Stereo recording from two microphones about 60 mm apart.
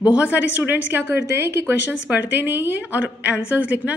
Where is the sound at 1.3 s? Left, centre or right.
Right.